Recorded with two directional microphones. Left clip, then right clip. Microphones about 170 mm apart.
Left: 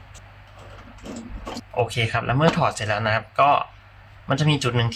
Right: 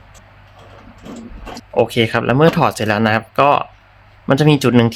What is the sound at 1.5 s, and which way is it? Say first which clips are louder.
Speech: right 8 dB; 55° right (ahead or behind).